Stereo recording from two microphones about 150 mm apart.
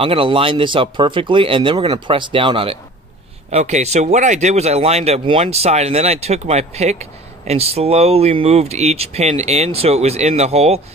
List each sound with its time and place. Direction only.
0.0 s speech: 35° right (ahead or behind)
3.4 s speech: 50° right (ahead or behind)